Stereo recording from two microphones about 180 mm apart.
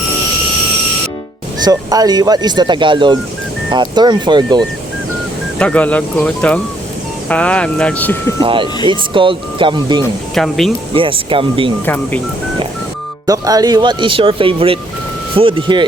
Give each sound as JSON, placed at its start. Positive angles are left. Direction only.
{"t": 1.6, "sound": "speech", "side_deg": -20}
{"t": 5.5, "sound": "speech", "side_deg": 5}
{"t": 8.4, "sound": "speech", "side_deg": -30}
{"t": 10.3, "sound": "speech", "side_deg": 0}
{"t": 10.9, "sound": "speech", "side_deg": -30}
{"t": 13.2, "sound": "speech", "side_deg": -20}